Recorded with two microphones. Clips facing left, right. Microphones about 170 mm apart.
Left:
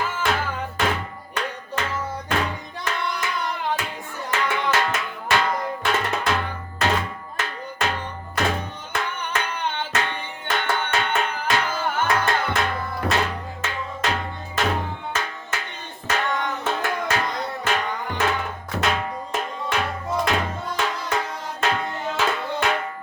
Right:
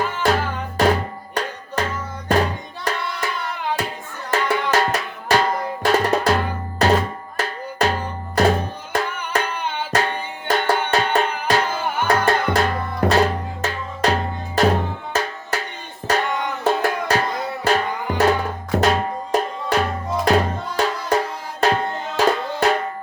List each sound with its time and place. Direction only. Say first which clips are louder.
0.2 s music: right 6 dB; 40° right (ahead or behind)
0.8 s drum: right 9 dB; 40° right (ahead or behind)
2.3 s music: right 8 dB; 40° right (ahead or behind)
4.3 s drum: right 4 dB; 40° right (ahead or behind)
9.3 s music: right 4 dB; 35° right (ahead or behind)